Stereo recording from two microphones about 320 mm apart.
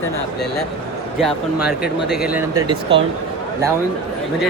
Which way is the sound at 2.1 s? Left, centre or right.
Centre.